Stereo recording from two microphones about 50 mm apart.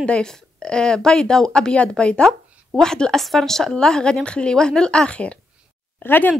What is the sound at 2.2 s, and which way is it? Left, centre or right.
A woman's voice, centre.